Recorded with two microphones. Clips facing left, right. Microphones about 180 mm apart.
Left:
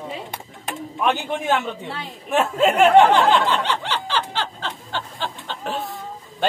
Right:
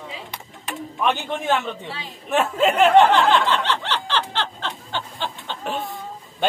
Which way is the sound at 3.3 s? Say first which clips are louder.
Even; 10° left (ahead or behind).